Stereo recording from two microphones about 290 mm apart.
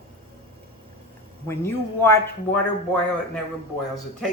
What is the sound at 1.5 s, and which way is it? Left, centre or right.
A man's voice, centre.